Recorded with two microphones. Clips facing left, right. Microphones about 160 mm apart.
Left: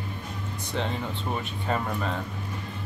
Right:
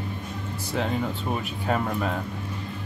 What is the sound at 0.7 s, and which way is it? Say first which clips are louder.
Speech: right 4 dB; 5° right (ahead or behind).